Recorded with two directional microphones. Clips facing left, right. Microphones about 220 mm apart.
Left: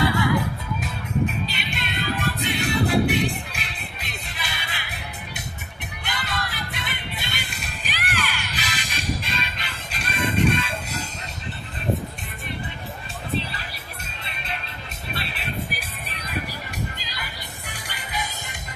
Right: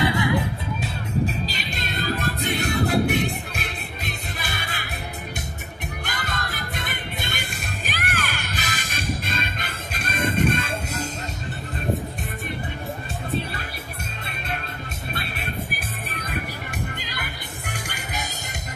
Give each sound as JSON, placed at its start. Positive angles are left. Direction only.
{"t": 0.0, "sound": "music", "side_deg": -20}
{"t": 1.5, "sound": "music", "side_deg": -40}
{"t": 6.0, "sound": "music", "side_deg": -45}
{"t": 13.4, "sound": "music", "side_deg": -50}
{"t": 15.1, "sound": "music", "side_deg": -50}